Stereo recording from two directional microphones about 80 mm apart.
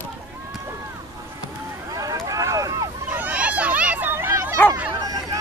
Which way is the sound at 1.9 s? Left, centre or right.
Right.